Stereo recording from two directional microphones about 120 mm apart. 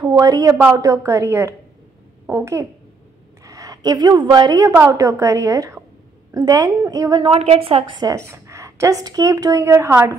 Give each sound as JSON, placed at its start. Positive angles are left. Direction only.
{"t": 0.1, "sound": "a woman's voice", "side_deg": -30}
{"t": 7.2, "sound": "a woman's voice", "side_deg": -55}
{"t": 8.3, "sound": "a woman's voice", "side_deg": -25}